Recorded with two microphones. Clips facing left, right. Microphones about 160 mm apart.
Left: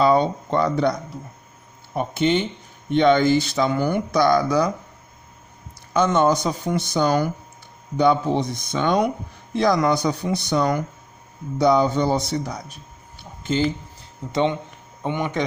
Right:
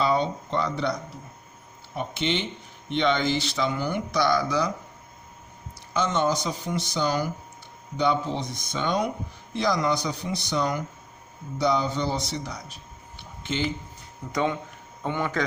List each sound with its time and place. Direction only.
0.0 s speech: 50° left (ahead or behind)
2.0 s speech: 45° left (ahead or behind)
5.9 s speech: 50° left (ahead or behind)
13.4 s speech: 40° left (ahead or behind)
14.3 s speech: 25° left (ahead or behind)